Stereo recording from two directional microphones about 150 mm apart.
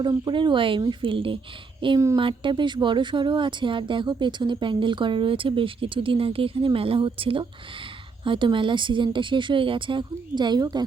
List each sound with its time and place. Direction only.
0.0 s speech: 30° right (ahead or behind)